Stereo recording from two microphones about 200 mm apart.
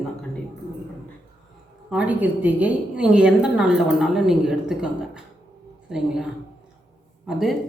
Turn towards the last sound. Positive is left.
turn(degrees=0)  # may be behind; listen again after turning